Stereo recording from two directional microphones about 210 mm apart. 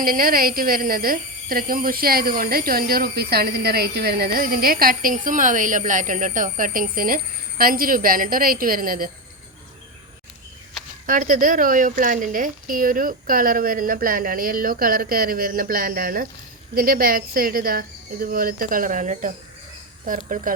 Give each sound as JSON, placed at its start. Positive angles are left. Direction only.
{"t": 0.0, "sound": "a woman's voice", "side_deg": -45}
{"t": 11.0, "sound": "a woman's voice", "side_deg": -40}